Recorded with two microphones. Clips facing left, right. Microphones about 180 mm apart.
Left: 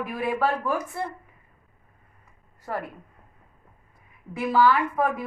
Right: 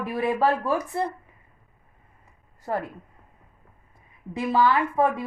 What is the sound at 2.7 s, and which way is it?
Speech, 25° right (ahead or behind).